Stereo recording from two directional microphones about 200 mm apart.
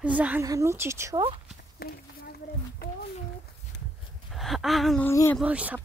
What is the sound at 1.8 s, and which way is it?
Speech, 50° left (ahead or behind).